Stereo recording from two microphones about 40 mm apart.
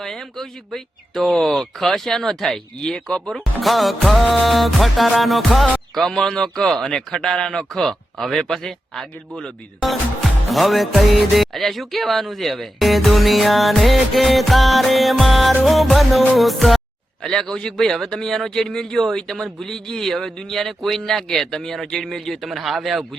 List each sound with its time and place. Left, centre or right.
0.0 s a man's voice: centre
3.2 s music: centre
5.9 s speech: centre
6.1 s a man's voice: centre
7.7 s a man's voice: centre
9.8 s music: centre
17.2 s a man's voice: centre
17.7 s a man's voice: centre